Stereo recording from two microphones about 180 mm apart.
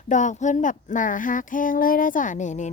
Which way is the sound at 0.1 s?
45° left (ahead or behind).